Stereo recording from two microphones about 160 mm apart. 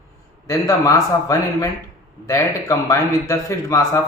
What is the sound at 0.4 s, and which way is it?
Speech, 20° left (ahead or behind).